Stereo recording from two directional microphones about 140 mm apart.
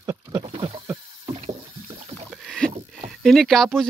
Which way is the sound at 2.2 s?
Centre (ahead or behind).